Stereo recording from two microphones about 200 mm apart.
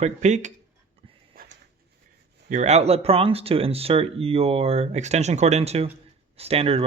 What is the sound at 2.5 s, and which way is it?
Speech, 35° right (ahead or behind).